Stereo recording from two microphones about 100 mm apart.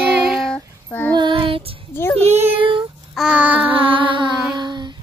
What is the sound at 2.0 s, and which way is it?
Child singing, 20° left (ahead or behind).